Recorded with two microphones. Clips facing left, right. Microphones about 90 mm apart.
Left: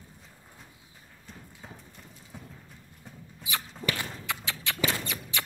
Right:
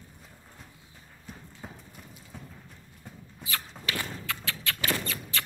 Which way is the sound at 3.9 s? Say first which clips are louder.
Even; 20° left (ahead or behind).